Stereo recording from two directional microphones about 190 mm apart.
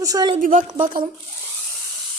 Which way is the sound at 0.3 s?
45° right (ahead or behind).